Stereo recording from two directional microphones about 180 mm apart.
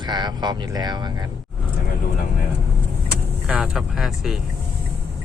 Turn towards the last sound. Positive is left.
turn(degrees=0)  # may be behind; listen again after turning